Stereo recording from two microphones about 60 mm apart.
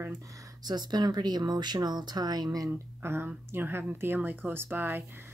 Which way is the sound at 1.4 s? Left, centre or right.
Right.